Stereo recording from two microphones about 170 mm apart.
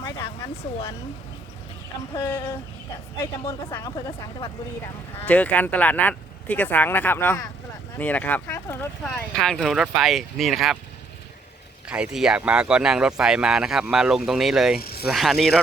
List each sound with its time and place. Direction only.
2.2 s speech: 15° left (ahead or behind)
3.7 s speech: 25° left (ahead or behind)
5.2 s speech: 10° left (ahead or behind)
9.0 s speech: 5° left (ahead or behind)
11.9 s speech: 5° right (ahead or behind)
14.8 s speech: 65° left (ahead or behind)
15.0 s speech: centre (ahead or behind)